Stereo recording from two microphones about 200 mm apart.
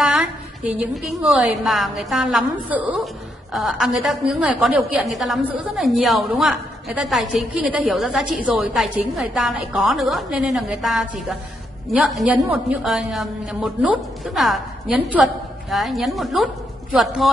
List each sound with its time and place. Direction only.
0.0 s a woman's voice: centre (ahead or behind)